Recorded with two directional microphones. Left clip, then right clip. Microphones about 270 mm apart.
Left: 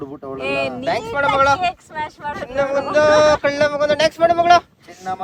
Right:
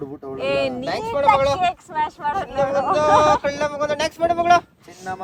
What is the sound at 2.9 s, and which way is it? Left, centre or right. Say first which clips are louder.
Speech: left 3 dB; left.